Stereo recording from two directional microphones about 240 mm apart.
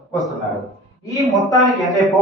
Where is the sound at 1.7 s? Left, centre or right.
Centre.